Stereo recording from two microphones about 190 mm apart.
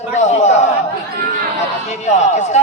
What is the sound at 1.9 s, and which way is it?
Speech, 40° left (ahead or behind).